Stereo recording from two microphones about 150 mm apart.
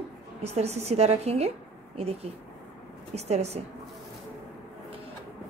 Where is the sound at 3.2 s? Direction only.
45° right (ahead or behind).